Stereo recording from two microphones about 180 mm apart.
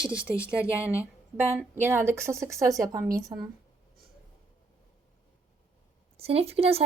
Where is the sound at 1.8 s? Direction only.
15° right (ahead or behind).